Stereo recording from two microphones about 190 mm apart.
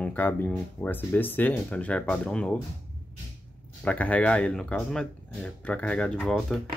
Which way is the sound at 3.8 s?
5° left (ahead or behind).